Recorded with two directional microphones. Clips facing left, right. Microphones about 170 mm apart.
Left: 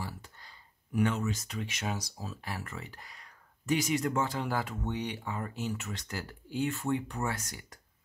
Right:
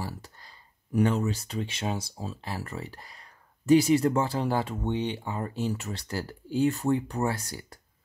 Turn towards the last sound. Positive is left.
turn(degrees=-35)  # may be behind; listen again after turning